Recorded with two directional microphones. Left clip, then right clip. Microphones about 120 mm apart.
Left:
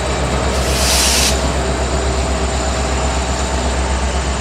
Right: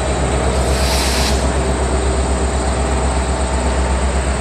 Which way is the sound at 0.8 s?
50° left (ahead or behind).